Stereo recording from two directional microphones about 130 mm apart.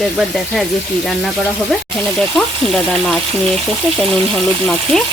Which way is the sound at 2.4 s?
5° left (ahead or behind).